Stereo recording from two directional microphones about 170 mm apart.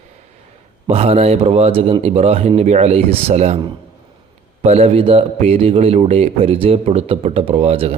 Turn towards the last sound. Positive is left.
turn(degrees=-35)  # may be behind; listen again after turning